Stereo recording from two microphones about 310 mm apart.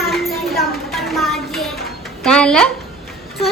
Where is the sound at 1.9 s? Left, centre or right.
Centre.